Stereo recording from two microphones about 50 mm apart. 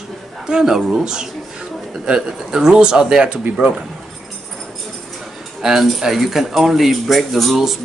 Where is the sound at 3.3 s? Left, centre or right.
Right.